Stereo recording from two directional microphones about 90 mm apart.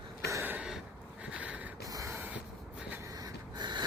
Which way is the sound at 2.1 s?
20° right (ahead or behind).